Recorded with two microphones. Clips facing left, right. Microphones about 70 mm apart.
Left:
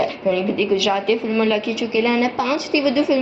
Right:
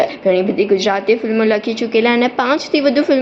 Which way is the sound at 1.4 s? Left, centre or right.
Right.